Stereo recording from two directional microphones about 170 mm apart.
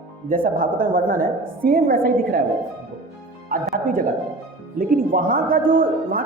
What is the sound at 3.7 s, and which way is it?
A man's voice, 55° right (ahead or behind).